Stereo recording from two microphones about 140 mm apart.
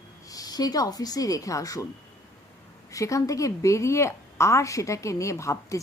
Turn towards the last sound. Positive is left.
turn(degrees=20)  # may be behind; listen again after turning